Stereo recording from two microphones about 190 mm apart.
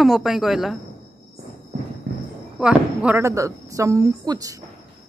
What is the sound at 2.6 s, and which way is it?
Speech, 5° right (ahead or behind).